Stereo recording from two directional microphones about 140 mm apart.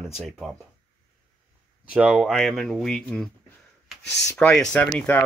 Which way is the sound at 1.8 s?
5° right (ahead or behind).